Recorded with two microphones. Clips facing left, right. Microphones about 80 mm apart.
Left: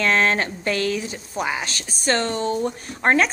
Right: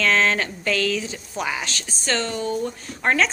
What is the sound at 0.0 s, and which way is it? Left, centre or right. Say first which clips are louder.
Speech: left 1 dB; left.